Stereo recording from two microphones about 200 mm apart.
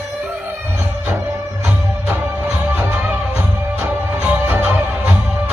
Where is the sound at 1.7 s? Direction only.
10° right (ahead or behind).